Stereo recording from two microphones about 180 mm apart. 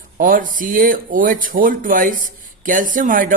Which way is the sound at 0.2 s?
50° right (ahead or behind).